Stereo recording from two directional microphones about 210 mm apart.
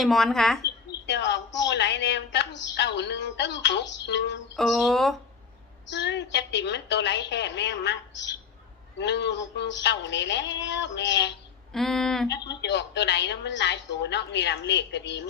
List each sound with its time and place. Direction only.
0.0 s speech: centre (ahead or behind)
1.0 s a woman's voice: 55° left (ahead or behind)
4.5 s speech: centre (ahead or behind)
5.9 s a woman's voice: 55° left (ahead or behind)
11.7 s speech: centre (ahead or behind)
12.3 s a woman's voice: 55° left (ahead or behind)